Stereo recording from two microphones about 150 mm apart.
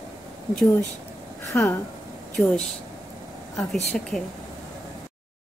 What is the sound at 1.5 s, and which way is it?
Speech, 15° left (ahead or behind).